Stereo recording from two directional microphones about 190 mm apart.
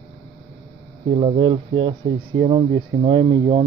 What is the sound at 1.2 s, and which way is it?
Speech, 30° right (ahead or behind).